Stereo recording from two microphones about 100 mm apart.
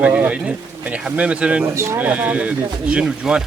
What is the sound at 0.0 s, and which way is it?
Speech, 15° right (ahead or behind).